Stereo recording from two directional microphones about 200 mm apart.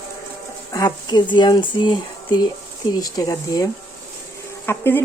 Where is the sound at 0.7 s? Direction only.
20° left (ahead or behind).